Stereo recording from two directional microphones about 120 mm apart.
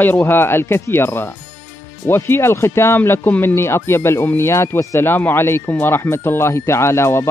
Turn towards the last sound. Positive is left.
turn(degrees=20)  # may be behind; listen again after turning